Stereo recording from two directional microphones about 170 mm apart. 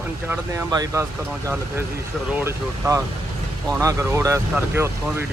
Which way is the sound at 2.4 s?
15° right (ahead or behind).